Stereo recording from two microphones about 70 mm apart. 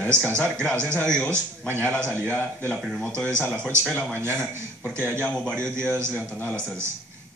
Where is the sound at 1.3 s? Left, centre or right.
Right.